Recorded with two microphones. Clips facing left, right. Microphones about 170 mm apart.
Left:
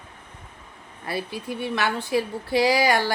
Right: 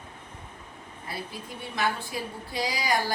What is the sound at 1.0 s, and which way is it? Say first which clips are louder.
A woman's voice: left 8 dB; 75° left (ahead or behind).